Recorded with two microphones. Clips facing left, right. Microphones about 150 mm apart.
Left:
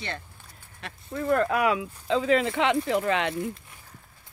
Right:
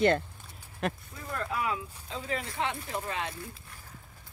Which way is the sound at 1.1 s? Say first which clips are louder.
Left 11 dB; 75° left (ahead or behind).